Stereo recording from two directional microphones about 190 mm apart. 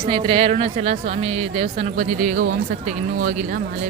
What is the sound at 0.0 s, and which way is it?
Speech, 25° right (ahead or behind).